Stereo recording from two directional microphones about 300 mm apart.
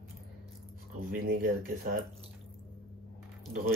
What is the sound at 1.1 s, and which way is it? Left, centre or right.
Speech, right.